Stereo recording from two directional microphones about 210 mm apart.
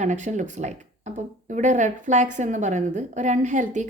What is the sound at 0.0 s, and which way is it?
A woman's voice, 35° right (ahead or behind).